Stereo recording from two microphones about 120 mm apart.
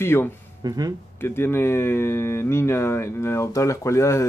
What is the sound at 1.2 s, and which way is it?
Speech, 20° left (ahead or behind).